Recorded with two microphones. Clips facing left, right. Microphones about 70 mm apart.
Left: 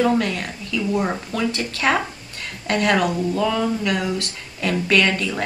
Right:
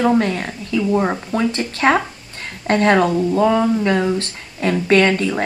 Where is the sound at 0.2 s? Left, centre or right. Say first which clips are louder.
Right 4 dB; right.